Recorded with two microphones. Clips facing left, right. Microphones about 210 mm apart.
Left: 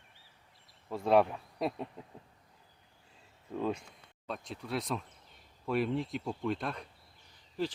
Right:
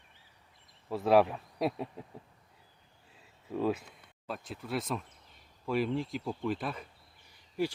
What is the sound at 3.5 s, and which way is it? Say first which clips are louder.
Speech: right 3 dB; 5° right (ahead or behind).